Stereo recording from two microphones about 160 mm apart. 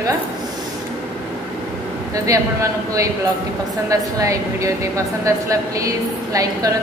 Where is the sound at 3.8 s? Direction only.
20° right (ahead or behind).